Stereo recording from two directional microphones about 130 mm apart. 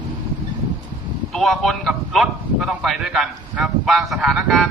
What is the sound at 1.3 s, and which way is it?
A man's voice, centre (ahead or behind).